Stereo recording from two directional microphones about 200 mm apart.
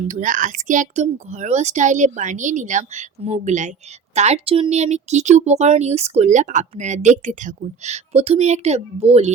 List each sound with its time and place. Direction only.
0.1 s speech: 40° right (ahead or behind)